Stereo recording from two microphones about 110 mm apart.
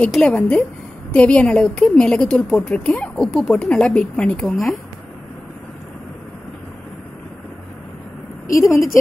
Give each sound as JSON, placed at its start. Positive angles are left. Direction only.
{"t": 0.2, "sound": "a woman's voice", "side_deg": 10}
{"t": 8.5, "sound": "a woman's voice", "side_deg": 30}